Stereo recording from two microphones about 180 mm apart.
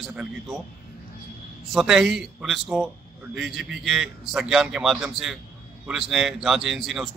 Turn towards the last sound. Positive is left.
turn(degrees=0)  # may be behind; listen again after turning